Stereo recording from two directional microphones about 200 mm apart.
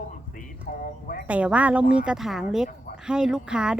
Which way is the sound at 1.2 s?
5° right (ahead or behind).